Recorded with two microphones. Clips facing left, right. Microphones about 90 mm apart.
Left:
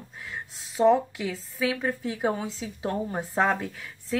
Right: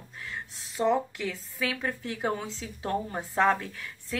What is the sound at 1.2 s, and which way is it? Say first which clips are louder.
A woman's voice: left 3 dB; 15° left (ahead or behind).